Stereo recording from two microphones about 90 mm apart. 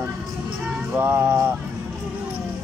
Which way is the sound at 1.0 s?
25° right (ahead or behind).